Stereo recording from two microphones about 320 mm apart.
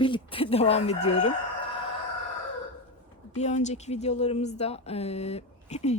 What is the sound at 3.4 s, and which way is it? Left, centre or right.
A woman's voice, left.